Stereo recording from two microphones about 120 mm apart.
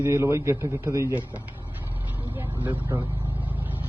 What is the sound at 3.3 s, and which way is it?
Vehicle, 15° right (ahead or behind).